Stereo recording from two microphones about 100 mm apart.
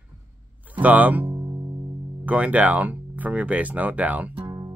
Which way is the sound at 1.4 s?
35° right (ahead or behind).